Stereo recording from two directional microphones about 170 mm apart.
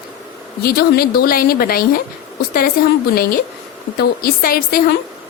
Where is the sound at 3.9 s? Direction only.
65° left (ahead or behind).